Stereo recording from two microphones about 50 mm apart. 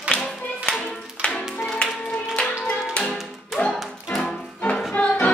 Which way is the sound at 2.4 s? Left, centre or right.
Centre.